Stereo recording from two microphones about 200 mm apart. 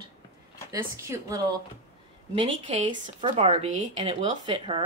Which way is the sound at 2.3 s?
30° right (ahead or behind).